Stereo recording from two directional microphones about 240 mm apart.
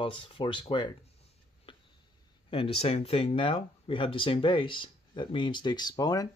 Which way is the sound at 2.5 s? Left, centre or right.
Left.